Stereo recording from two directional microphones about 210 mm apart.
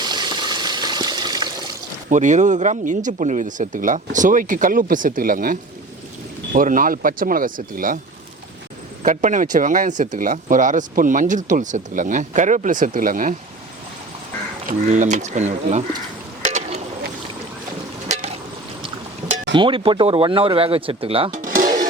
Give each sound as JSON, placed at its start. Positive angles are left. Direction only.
{"t": 0.0, "sound": "water", "side_deg": -20}
{"t": 2.0, "sound": "speech", "side_deg": -35}
{"t": 9.0, "sound": "speech", "side_deg": -35}
{"t": 14.7, "sound": "speech", "side_deg": -40}
{"t": 16.4, "sound": "a sound", "side_deg": -35}
{"t": 18.1, "sound": "a sound", "side_deg": -30}
{"t": 19.5, "sound": "speech", "side_deg": -25}
{"t": 21.4, "sound": "music", "side_deg": -40}